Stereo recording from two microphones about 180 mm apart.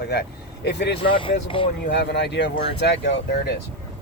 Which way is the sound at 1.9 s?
75° left (ahead or behind).